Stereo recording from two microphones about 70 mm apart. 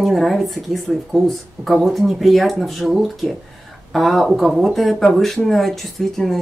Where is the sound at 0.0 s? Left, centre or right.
Centre.